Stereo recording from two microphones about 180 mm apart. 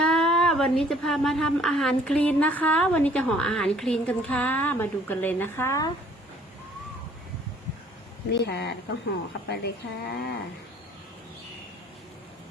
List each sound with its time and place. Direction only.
0.0 s a woman's voice: 5° left (ahead or behind)
8.3 s speech: 70° left (ahead or behind)